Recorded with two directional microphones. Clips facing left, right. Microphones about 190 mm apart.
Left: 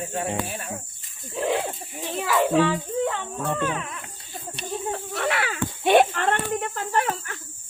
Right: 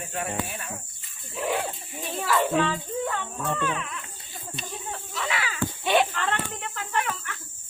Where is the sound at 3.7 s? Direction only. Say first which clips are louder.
Left 1 dB; 35° left (ahead or behind).